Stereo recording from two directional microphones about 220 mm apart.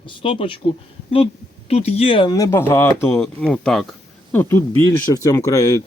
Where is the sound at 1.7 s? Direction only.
30° left (ahead or behind).